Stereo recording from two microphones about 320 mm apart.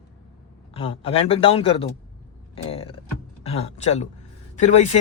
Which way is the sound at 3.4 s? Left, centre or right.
Centre.